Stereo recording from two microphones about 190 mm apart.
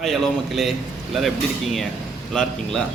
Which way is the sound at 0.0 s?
Centre (ahead or behind).